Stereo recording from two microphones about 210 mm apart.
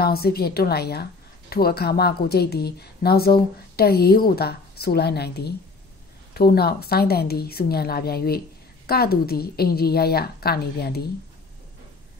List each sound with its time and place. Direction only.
0.0 s a woman's voice: 50° left (ahead or behind)